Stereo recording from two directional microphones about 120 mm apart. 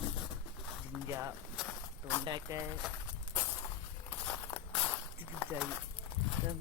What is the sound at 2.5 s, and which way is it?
Speech, 25° right (ahead or behind).